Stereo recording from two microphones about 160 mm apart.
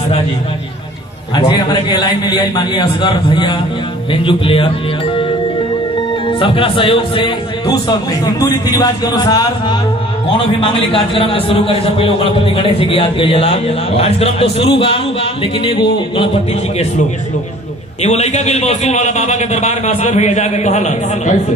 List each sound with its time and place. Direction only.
1.5 s a man's voice: 25° left (ahead or behind)
6.2 s a man's voice: 35° left (ahead or behind)
10.2 s a man's voice: 35° left (ahead or behind)
18.0 s a man's voice: 45° left (ahead or behind)